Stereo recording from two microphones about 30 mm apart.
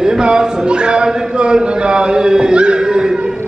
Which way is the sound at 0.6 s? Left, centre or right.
Right.